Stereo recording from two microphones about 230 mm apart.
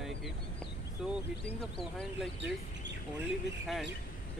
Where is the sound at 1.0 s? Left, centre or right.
Centre.